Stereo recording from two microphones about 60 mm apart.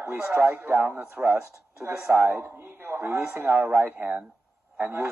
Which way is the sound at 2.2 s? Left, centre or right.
Right.